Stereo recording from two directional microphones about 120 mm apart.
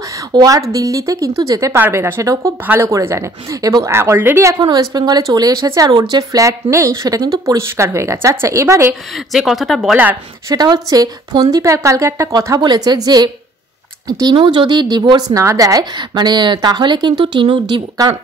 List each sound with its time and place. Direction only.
0.3 s a woman's voice: 30° right (ahead or behind)
4.6 s a woman's voice: 35° right (ahead or behind)
9.1 s speech: centre (ahead or behind)
10.5 s a woman's voice: 35° right (ahead or behind)